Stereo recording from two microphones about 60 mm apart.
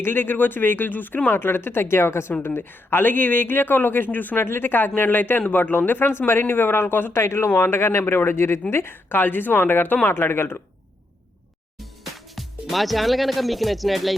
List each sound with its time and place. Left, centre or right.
0.0 s speech: left
2.4 s speech: left
11.8 s speech: centre